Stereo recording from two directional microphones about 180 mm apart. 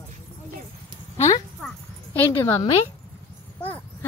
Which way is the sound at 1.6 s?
10° left (ahead or behind).